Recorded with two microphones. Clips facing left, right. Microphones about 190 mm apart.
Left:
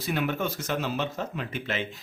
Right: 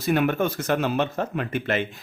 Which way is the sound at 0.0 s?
55° right (ahead or behind).